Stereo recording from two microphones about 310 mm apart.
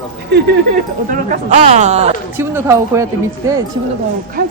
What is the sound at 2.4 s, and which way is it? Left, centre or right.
Speech, centre.